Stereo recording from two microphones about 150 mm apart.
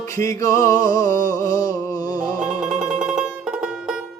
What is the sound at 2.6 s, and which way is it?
Music, 10° right (ahead or behind).